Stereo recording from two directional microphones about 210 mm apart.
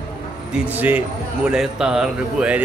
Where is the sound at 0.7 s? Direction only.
10° right (ahead or behind).